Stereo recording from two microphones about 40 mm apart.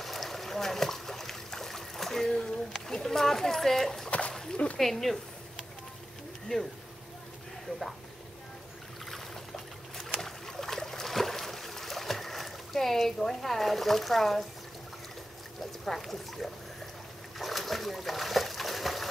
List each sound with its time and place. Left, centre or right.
0.0 s boat: centre
2.7 s a sound: centre
4.3 s dog: centre
4.7 s speech: centre
6.5 s speech: centre
9.9 s boat: centre
15.8 s speech: centre
17.4 s a sound: centre